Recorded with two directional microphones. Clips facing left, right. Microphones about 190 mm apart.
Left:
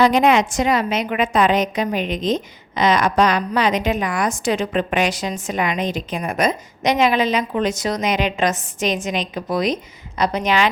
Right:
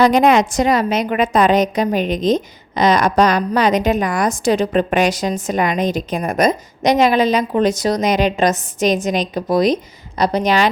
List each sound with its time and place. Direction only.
0.0 s a woman's voice: 40° right (ahead or behind)